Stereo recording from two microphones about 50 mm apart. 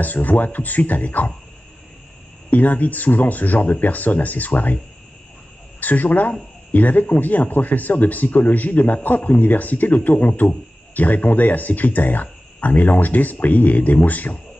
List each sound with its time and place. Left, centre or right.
0.0 s speech: left
2.5 s speech: left
5.8 s speech: left